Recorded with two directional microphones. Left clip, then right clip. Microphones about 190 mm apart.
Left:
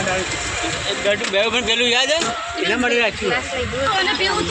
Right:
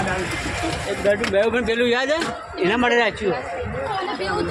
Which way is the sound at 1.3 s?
40° right (ahead or behind).